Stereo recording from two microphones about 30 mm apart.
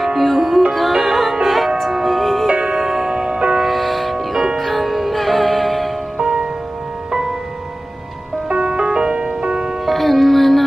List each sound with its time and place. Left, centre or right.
0.0 s music: centre
2.6 s music: centre
3.3 s music: right
3.5 s music: centre
6.1 s music: right
8.5 s music: right
9.8 s music: centre